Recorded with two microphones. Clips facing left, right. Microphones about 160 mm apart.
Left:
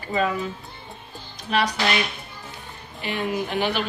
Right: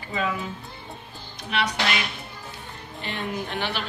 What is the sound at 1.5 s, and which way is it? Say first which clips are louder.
Speech: left 4 dB; 40° left (ahead or behind).